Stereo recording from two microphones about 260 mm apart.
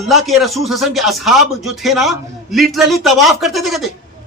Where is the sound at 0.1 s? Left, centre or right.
Centre.